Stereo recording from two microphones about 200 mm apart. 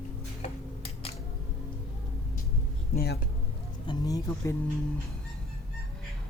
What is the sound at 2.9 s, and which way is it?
Speech, 50° left (ahead or behind).